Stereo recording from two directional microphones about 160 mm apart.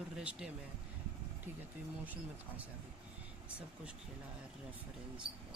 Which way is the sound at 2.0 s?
10° right (ahead or behind).